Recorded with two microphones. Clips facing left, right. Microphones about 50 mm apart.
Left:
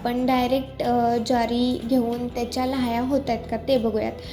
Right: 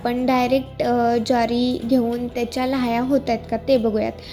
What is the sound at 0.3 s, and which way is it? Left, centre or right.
Music, right.